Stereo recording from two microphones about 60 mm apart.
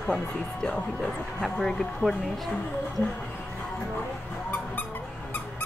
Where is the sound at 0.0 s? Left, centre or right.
Centre.